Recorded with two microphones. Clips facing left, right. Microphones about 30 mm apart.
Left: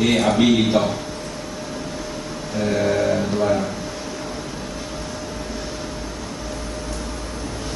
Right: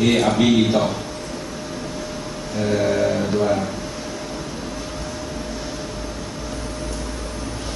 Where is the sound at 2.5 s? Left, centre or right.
Centre.